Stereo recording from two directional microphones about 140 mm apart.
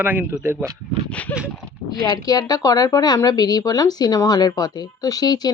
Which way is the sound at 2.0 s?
25° left (ahead or behind).